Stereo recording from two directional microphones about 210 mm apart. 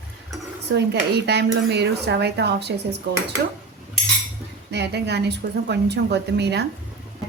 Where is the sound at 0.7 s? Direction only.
55° right (ahead or behind).